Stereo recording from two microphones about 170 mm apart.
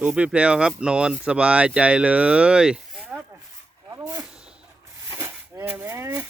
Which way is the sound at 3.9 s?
15° right (ahead or behind).